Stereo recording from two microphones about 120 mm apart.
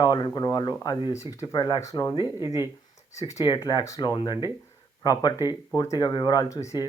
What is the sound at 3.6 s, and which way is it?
Speech, 30° left (ahead or behind).